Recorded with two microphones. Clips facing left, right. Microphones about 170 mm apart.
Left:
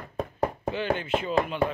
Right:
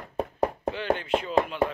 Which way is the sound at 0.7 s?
Centre (ahead or behind).